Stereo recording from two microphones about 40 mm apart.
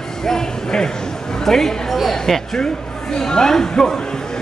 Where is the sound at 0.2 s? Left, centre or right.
Centre.